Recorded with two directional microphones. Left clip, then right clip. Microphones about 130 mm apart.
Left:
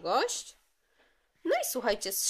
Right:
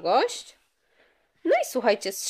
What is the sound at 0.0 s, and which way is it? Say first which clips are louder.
Speech: right 6 dB; 25° right (ahead or behind).